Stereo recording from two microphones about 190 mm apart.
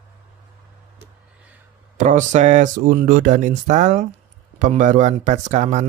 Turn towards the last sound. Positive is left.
turn(degrees=-35)  # may be behind; listen again after turning